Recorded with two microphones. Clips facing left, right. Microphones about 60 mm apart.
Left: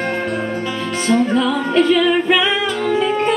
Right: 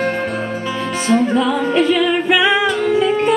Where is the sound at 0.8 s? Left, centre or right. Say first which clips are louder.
Right 1 dB; centre.